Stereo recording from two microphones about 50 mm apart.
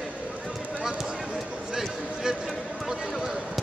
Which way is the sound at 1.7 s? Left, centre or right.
Centre.